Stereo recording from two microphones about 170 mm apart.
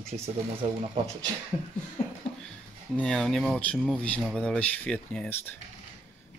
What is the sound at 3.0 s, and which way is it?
Speech, 5° left (ahead or behind).